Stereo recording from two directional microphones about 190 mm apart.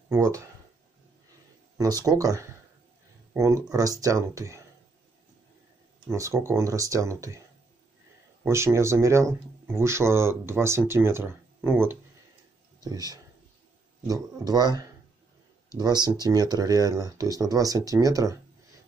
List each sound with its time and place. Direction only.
0.1 s speech: 15° right (ahead or behind)
1.8 s speech: 20° right (ahead or behind)
6.1 s speech: 15° right (ahead or behind)
8.5 s speech: 15° right (ahead or behind)